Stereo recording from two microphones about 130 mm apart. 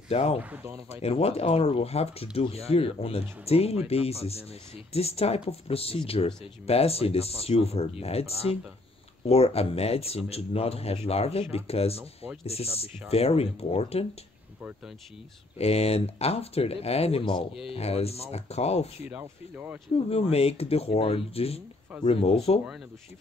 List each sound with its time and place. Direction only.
0.1 s speech: 50° left (ahead or behind)
0.4 s speech: 10° right (ahead or behind)
0.8 s speech: 50° left (ahead or behind)
15.5 s speech: 50° left (ahead or behind)
19.0 s speech: 10° right (ahead or behind)
20.1 s speech: 50° left (ahead or behind)